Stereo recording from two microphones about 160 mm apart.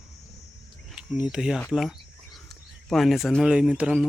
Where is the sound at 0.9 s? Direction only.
5° right (ahead or behind).